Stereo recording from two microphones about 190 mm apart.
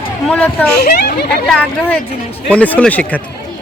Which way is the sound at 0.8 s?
55° left (ahead or behind).